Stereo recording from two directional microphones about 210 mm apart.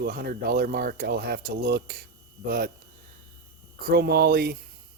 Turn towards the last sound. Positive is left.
turn(degrees=-45)  # may be behind; listen again after turning